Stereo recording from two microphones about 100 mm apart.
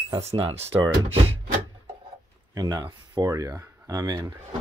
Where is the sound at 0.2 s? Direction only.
85° right.